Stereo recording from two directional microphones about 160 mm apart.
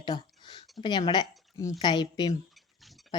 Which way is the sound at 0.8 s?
25° left (ahead or behind).